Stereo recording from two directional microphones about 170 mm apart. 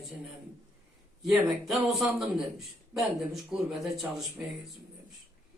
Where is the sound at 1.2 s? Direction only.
Centre (ahead or behind).